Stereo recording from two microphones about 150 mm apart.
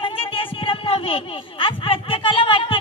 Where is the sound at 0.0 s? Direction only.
35° left (ahead or behind).